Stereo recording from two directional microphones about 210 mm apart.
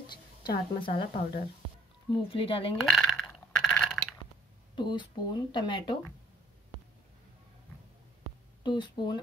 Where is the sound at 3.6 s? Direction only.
5° left (ahead or behind).